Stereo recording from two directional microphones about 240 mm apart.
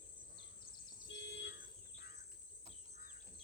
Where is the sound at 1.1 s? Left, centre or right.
Left.